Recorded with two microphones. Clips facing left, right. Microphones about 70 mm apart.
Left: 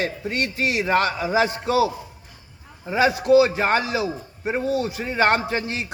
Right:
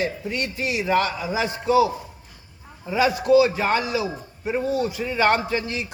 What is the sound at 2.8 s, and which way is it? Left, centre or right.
A man's voice, left.